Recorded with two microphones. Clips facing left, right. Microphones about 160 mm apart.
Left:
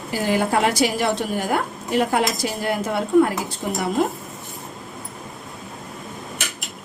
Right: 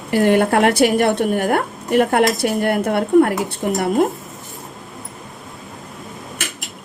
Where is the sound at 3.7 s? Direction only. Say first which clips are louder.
Right 4 dB; 50° right (ahead or behind).